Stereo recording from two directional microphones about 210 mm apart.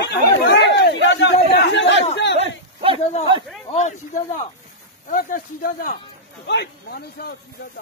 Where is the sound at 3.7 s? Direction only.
35° left (ahead or behind).